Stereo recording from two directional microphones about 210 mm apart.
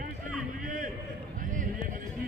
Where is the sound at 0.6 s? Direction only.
40° right (ahead or behind).